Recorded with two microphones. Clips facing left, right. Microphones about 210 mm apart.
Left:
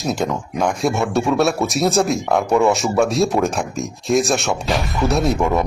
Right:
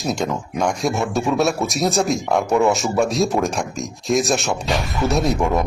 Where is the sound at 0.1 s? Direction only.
Centre (ahead or behind).